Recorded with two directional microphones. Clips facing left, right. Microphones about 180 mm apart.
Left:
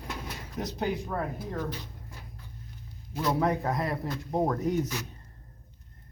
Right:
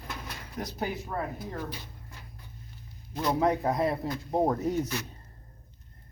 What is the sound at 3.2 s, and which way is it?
Speech, 15° right (ahead or behind).